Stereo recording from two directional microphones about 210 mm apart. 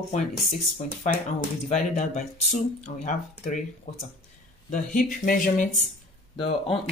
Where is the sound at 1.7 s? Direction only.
35° left (ahead or behind).